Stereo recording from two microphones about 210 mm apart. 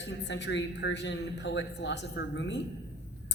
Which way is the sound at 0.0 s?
55° left (ahead or behind).